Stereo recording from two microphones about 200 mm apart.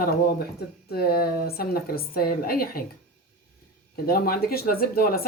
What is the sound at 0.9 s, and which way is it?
Speech, 50° left (ahead or behind).